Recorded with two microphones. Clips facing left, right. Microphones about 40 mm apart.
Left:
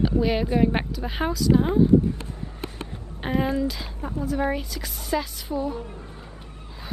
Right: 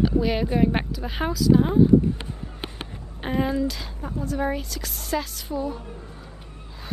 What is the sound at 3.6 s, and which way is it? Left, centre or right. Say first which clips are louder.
A woman's voice: even; centre.